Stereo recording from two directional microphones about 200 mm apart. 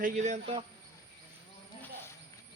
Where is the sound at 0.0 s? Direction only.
40° right (ahead or behind).